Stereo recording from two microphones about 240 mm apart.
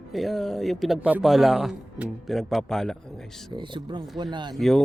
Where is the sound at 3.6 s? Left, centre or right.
Centre.